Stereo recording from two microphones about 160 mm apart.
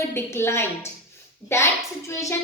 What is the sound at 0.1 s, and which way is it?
A child's voice, 15° left (ahead or behind).